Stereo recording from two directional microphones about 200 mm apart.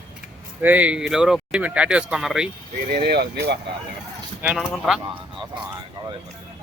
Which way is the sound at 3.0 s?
55° right (ahead or behind).